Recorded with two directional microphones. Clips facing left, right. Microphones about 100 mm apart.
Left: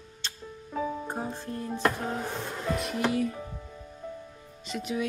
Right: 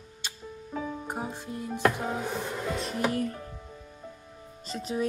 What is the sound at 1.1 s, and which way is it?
Speech, 10° right (ahead or behind).